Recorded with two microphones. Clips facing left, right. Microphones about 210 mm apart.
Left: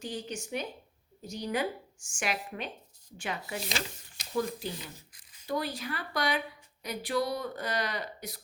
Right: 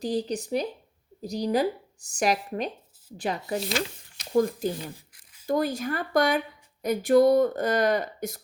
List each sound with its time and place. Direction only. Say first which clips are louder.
0.0 s speech: right 10 dB; 35° right (ahead or behind)